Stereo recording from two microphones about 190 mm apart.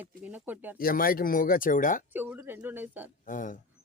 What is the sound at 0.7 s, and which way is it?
Speech, 50° left (ahead or behind).